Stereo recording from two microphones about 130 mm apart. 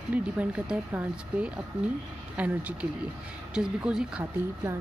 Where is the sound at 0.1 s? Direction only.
10° right (ahead or behind).